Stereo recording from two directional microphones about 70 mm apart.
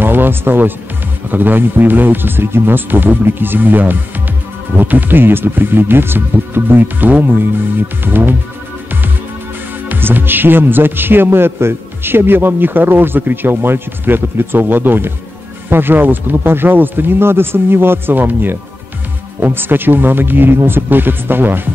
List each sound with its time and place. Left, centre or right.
0.0 s music: right
1.3 s speech: right
9.8 s a man's voice: right